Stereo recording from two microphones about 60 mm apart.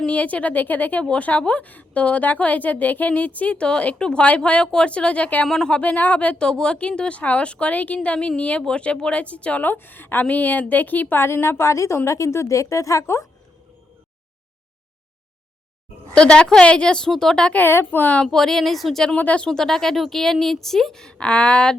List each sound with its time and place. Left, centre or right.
0.0 s a woman's voice: left
5.5 s a woman's voice: centre
5.7 s a woman's voice: left
11.2 s a woman's voice: left
16.1 s a woman's voice: centre
17.7 s a woman's voice: left
18.0 s a woman's voice: left
18.3 s speech: centre
19.1 s a woman's voice: left
19.5 s a woman's voice: centre